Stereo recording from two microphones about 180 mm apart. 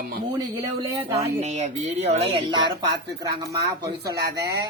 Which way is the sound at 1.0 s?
30° right (ahead or behind).